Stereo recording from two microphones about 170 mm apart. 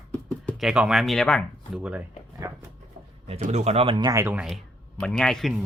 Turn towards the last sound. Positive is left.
turn(degrees=0)  # may be behind; listen again after turning